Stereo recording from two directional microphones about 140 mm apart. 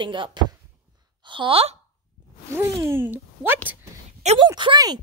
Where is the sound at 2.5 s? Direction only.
20° right (ahead or behind).